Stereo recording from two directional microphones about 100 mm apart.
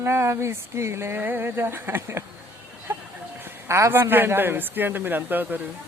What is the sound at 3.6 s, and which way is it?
Mantra, 30° right (ahead or behind).